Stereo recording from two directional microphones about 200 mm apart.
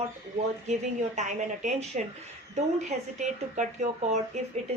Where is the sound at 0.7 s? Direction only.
35° right (ahead or behind).